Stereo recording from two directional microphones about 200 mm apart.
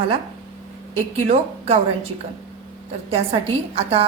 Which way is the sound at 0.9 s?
30° right (ahead or behind).